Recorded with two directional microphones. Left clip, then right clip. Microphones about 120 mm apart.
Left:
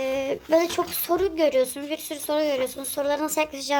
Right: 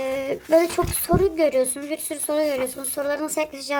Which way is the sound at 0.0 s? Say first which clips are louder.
Even; 20° right (ahead or behind).